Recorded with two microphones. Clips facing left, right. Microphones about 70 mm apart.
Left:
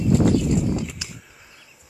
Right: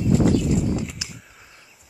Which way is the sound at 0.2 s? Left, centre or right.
Centre.